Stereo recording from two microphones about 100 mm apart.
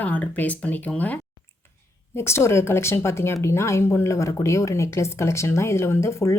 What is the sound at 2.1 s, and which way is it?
Speech, 25° left (ahead or behind).